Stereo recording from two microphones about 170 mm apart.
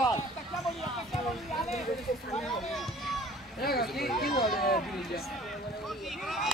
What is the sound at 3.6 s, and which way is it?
Speech, 65° left (ahead or behind).